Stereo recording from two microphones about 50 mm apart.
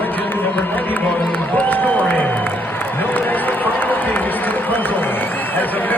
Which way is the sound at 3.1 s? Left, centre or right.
Left.